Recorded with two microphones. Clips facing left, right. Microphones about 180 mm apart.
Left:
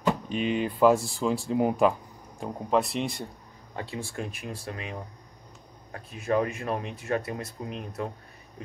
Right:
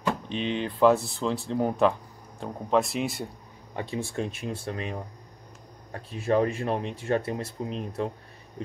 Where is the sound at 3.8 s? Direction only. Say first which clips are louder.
Right 4 dB; 20° right (ahead or behind).